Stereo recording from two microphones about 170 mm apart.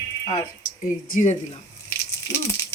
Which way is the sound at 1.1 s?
50° left (ahead or behind).